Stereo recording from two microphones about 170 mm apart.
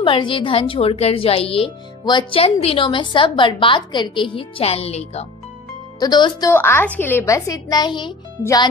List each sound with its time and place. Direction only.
0.0 s a woman's voice: 30° left (ahead or behind)
5.9 s speech: 25° left (ahead or behind)
6.5 s speech: 15° left (ahead or behind)